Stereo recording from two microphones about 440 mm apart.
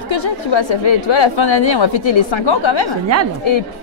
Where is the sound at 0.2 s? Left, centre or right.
Left.